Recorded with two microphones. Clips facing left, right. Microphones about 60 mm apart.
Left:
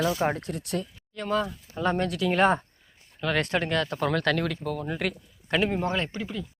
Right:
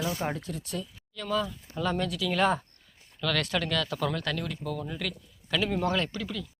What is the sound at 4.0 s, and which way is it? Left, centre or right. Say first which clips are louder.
Speech: left 6 dB; left.